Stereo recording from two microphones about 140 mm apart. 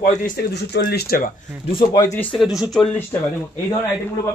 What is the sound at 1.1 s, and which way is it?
Speech, 90° left.